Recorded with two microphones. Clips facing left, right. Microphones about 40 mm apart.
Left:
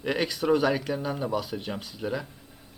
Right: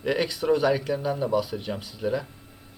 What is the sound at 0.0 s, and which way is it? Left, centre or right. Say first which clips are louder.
Speech: right 2 dB; centre.